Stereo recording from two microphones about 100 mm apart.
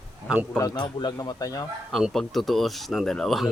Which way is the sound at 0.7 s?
45° left (ahead or behind).